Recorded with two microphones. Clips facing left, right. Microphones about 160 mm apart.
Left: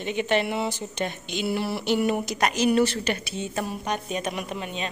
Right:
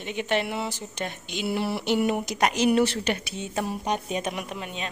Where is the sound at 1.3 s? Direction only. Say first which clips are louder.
Right 1 dB; 15° right (ahead or behind).